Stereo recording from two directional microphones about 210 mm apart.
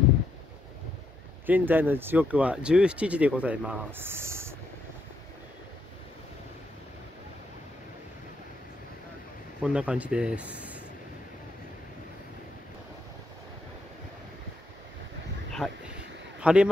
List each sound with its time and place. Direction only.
1.4 s speech: 10° right (ahead or behind)
9.6 s speech: 5° right (ahead or behind)
15.6 s speech: 5° left (ahead or behind)
16.3 s a sound: 5° right (ahead or behind)